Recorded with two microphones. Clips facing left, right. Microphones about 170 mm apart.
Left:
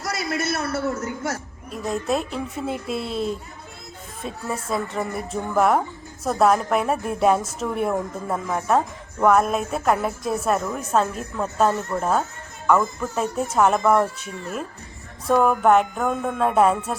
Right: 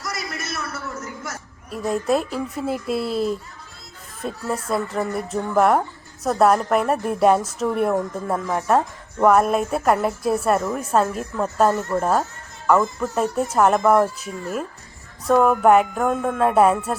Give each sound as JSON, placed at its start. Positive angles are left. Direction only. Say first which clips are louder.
{"t": 0.6, "sound": "a man's voice", "louder": "left 7 dB", "side_deg": 30}
{"t": 1.7, "sound": "speech", "louder": "right 3 dB", "side_deg": -5}